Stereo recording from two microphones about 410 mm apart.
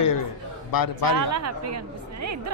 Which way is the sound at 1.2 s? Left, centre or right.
Right.